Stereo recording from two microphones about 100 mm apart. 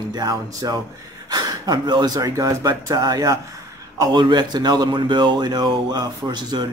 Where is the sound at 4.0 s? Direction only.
50° right (ahead or behind).